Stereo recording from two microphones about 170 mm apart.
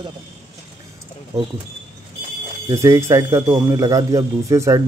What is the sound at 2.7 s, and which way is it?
Speech, 15° right (ahead or behind).